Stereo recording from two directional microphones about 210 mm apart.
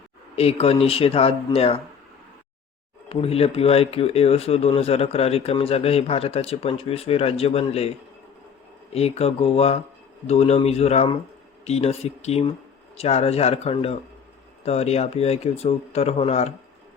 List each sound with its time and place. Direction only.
0.3 s speech: 30° left (ahead or behind)
3.1 s speech: 30° left (ahead or behind)